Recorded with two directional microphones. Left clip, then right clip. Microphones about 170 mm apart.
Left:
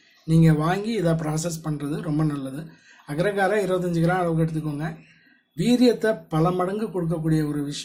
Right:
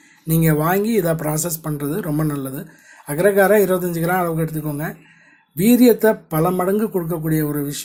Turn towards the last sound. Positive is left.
turn(degrees=-40)  # may be behind; listen again after turning